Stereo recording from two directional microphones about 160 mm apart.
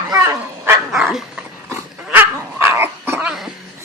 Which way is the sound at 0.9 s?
5° right (ahead or behind).